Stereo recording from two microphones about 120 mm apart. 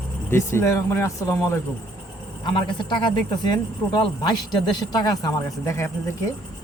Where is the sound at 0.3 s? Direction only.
20° left (ahead or behind).